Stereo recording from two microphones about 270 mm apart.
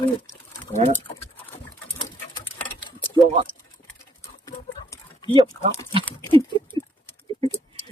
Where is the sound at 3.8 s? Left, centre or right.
Centre.